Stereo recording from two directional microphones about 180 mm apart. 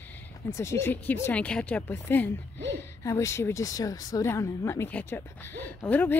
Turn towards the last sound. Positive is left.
turn(degrees=10)  # may be behind; listen again after turning